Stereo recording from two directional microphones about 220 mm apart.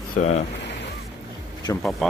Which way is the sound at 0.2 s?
35° left (ahead or behind).